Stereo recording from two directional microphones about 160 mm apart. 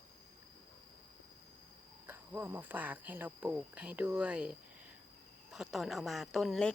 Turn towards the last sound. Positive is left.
turn(degrees=0)  # may be behind; listen again after turning